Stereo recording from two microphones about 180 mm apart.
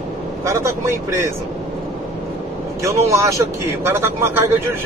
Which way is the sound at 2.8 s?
15° right (ahead or behind).